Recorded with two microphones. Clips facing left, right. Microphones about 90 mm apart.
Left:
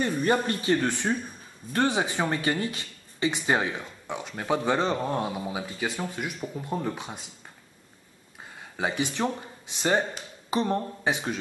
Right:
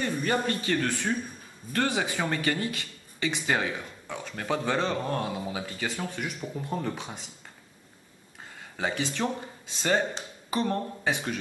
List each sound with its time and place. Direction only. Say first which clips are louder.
0.0 s speech: left 3 dB; 20° left (ahead or behind)
8.7 s speech: left 2 dB; 15° left (ahead or behind)